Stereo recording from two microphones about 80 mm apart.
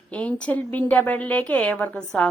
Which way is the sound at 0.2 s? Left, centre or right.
Centre.